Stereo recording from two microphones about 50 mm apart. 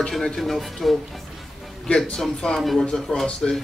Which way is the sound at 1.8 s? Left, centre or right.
Centre.